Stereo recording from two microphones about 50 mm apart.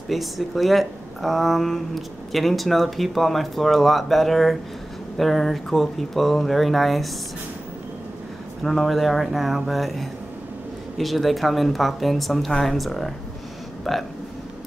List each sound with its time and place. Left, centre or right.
0.1 s speech: centre
8.6 s speech: centre